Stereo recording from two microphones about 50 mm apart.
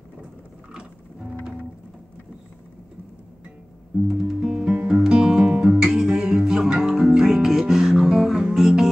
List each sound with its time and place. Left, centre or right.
0.7 s music: centre
4.1 s music: centre